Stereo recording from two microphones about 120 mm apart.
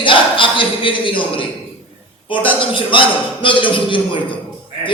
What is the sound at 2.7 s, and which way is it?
A woman's voice, 45° left (ahead or behind).